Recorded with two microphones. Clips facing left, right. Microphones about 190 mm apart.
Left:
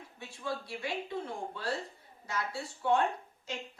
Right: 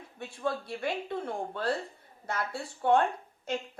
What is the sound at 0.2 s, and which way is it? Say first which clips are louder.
Speech: right 5 dB; 55° right (ahead or behind).